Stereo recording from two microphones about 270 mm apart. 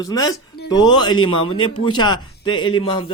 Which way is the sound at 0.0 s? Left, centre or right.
Centre.